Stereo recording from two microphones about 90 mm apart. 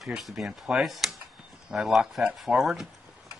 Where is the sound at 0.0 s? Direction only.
5° right (ahead or behind).